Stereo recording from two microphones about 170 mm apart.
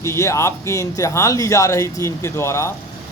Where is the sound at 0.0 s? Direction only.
15° left (ahead or behind).